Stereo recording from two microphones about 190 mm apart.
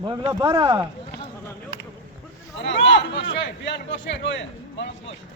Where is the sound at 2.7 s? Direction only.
70° left (ahead or behind).